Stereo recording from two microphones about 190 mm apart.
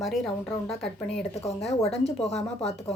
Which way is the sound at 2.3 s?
35° left (ahead or behind).